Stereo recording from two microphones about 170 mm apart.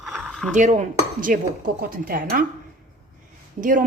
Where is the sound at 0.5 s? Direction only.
45° right (ahead or behind).